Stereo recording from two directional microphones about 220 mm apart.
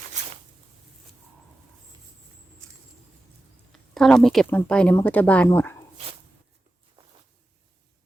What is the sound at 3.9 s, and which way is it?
Speech, centre (ahead or behind).